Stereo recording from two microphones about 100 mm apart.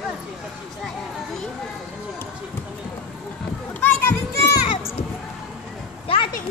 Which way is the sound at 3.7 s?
20° left (ahead or behind).